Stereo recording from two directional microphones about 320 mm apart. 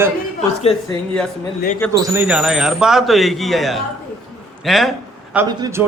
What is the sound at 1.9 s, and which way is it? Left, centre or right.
A man's voice, centre.